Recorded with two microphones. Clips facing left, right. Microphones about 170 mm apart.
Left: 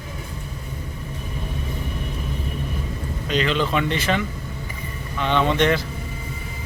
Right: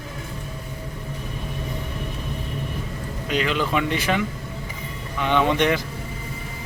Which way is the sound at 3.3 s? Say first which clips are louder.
Left 1 dB; 10° right (ahead or behind).